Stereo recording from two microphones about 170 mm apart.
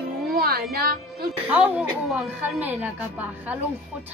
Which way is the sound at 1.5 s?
5° right (ahead or behind).